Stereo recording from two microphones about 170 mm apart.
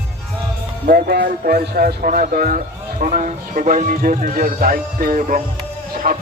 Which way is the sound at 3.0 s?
45° right (ahead or behind).